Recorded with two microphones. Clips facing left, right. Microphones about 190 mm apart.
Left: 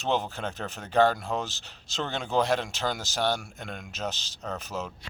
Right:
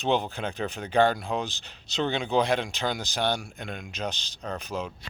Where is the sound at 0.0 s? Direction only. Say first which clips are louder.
Right 2 dB; centre (ahead or behind).